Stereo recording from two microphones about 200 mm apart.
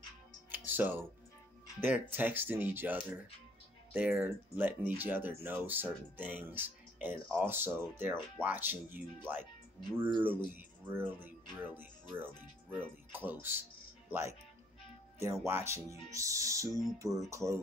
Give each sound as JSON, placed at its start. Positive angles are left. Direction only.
{"t": 0.5, "sound": "music", "side_deg": -10}
{"t": 1.8, "sound": "speech", "side_deg": -10}
{"t": 10.2, "sound": "speech", "side_deg": -10}
{"t": 15.4, "sound": "speech", "side_deg": -15}